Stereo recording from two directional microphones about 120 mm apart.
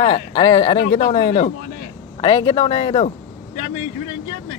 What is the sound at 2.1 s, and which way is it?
Speech, 40° left (ahead or behind).